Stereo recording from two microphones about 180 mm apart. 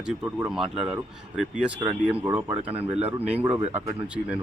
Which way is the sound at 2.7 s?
35° right (ahead or behind).